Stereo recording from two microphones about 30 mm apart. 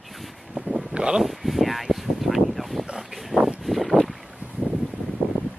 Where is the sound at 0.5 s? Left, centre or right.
Right.